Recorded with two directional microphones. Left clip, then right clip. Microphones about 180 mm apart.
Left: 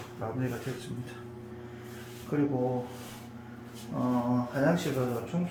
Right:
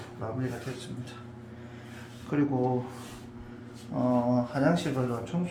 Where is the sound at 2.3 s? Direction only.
5° right (ahead or behind).